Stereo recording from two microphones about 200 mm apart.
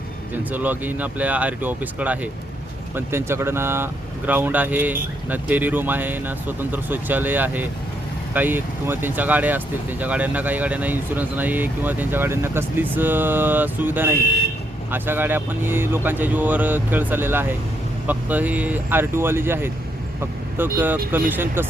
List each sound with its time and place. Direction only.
0.5 s speech: 10° right (ahead or behind)